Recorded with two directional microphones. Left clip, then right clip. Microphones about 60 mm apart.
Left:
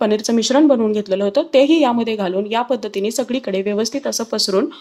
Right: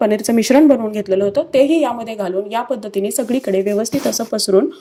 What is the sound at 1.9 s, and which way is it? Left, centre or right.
A woman's voice, centre.